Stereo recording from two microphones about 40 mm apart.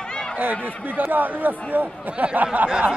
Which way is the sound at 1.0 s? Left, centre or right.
Right.